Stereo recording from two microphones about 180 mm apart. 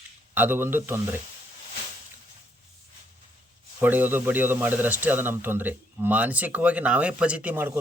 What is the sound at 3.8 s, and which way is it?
A man's voice, 10° right (ahead or behind).